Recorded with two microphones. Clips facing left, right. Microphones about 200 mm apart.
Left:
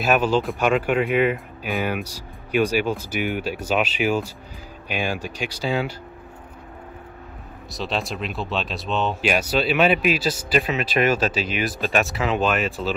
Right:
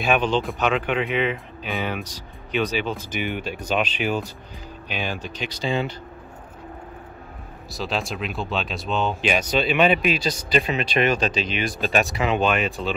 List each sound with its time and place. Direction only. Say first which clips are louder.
0.0 s speech: left 2 dB; 5° left (ahead or behind)
7.7 s speech: even; centre (ahead or behind)